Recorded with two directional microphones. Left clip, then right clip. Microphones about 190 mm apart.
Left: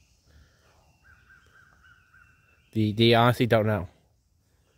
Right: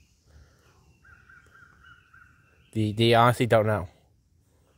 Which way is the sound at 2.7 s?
25° left (ahead or behind).